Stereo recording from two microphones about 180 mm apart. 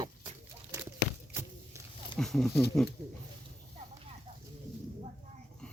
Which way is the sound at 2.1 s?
Centre (ahead or behind).